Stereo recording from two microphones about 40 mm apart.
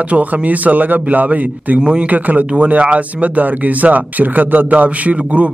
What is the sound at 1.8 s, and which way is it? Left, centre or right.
Speech, right.